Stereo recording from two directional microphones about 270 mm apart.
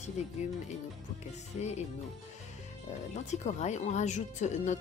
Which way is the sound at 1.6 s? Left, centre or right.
Left.